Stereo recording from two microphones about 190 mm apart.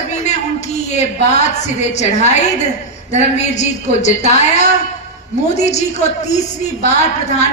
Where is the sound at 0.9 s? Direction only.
35° left (ahead or behind).